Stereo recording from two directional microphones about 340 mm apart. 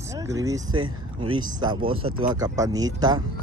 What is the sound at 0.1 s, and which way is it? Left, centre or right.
Speech, centre.